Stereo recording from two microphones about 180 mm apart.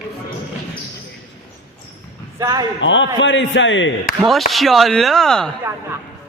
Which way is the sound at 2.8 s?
90° left.